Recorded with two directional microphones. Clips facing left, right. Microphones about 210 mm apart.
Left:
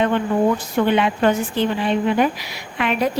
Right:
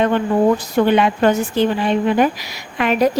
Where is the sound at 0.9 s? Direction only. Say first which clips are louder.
Right 2 dB; 45° right (ahead or behind).